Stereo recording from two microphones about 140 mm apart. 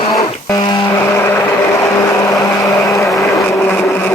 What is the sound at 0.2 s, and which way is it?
Music, 25° left (ahead or behind).